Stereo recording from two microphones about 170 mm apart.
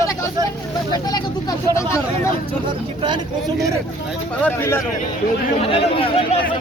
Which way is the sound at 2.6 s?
30° right (ahead or behind).